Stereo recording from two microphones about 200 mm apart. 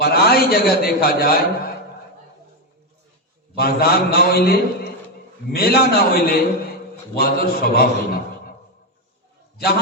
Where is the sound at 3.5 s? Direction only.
50° left (ahead or behind).